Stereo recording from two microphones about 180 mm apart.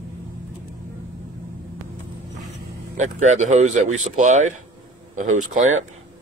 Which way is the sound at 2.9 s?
40° right (ahead or behind).